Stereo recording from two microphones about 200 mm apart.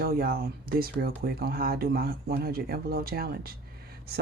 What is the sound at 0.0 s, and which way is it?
Speech, 50° right (ahead or behind).